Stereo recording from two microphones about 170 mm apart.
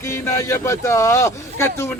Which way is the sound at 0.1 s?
15° left (ahead or behind).